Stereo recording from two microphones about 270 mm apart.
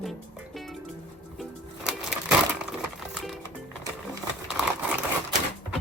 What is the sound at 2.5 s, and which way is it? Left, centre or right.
Crumpling, centre.